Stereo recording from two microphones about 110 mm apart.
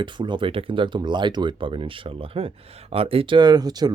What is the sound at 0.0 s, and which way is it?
Speech, 45° right (ahead or behind).